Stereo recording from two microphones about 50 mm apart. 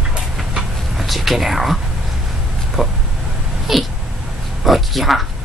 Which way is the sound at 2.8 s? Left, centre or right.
Centre.